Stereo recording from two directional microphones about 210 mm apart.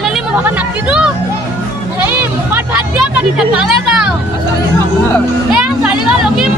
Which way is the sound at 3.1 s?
5° right (ahead or behind).